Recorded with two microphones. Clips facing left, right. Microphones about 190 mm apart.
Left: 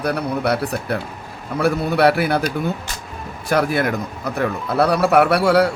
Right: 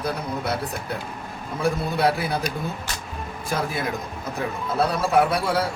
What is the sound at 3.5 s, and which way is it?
A man's voice, 75° left (ahead or behind).